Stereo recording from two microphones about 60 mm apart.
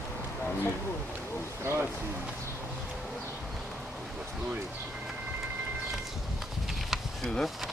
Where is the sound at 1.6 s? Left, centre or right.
Right.